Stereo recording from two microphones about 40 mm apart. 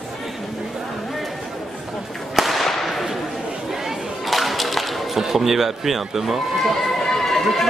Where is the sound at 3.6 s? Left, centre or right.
Centre.